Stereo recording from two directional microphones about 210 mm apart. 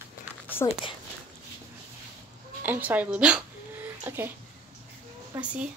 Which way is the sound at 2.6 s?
10° right (ahead or behind).